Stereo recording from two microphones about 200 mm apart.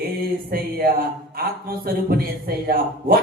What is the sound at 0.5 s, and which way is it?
A man's voice, 50° right (ahead or behind).